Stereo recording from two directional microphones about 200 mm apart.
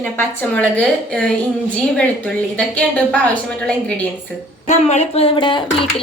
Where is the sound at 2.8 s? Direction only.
5° left (ahead or behind).